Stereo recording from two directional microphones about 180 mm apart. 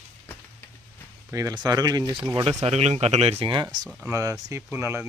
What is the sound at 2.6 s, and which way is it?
Speech, 40° right (ahead or behind).